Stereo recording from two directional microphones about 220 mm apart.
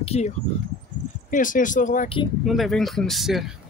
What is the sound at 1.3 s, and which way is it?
Speech, 35° left (ahead or behind).